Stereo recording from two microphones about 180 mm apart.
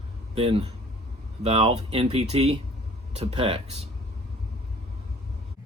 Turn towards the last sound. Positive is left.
turn(degrees=-35)  # may be behind; listen again after turning